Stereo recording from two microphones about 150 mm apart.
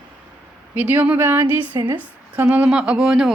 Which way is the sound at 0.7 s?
10° right (ahead or behind).